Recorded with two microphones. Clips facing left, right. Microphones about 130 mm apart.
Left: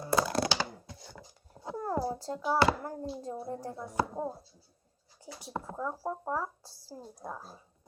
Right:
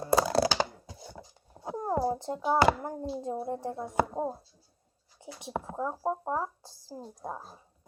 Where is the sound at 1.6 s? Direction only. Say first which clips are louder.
Right 3 dB; 20° right (ahead or behind).